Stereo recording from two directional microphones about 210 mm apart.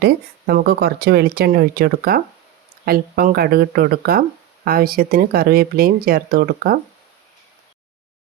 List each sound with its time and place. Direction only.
0.0 s speech: 50° right (ahead or behind)